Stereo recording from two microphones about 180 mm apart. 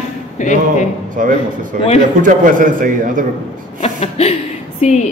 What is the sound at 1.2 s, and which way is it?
A man's voice, 45° right (ahead or behind).